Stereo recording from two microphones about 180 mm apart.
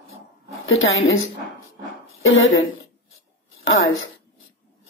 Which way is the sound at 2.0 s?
90° left.